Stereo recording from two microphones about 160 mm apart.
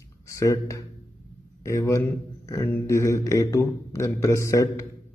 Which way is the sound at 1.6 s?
20° left (ahead or behind).